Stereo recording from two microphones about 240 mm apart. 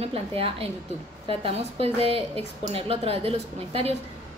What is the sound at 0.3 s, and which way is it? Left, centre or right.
A woman's voice, right.